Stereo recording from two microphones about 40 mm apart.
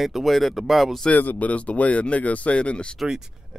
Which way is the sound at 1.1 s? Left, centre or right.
Left.